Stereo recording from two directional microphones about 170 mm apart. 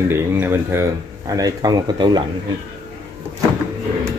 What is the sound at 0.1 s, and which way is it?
Speech, 15° right (ahead or behind).